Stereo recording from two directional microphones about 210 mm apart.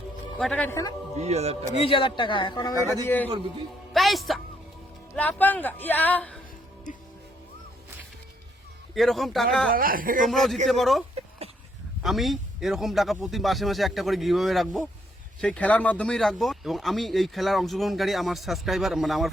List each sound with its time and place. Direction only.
0.3 s speech: 5° left (ahead or behind)
1.1 s speech: 30° right (ahead or behind)
1.7 s a man's voice: 25° left (ahead or behind)
2.7 s a man's voice: 15° right (ahead or behind)
3.9 s music: centre (ahead or behind)
5.1 s speech: 5° left (ahead or behind)
9.0 s speech: centre (ahead or behind)
9.7 s speech: 40° right (ahead or behind)
10.2 s speech: centre (ahead or behind)
12.0 s speech: centre (ahead or behind)